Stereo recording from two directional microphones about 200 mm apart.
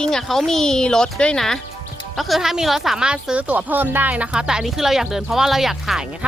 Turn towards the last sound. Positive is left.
turn(degrees=0)  # may be behind; listen again after turning